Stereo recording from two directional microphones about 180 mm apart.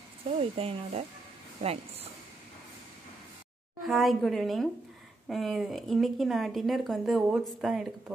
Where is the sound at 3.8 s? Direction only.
Centre (ahead or behind).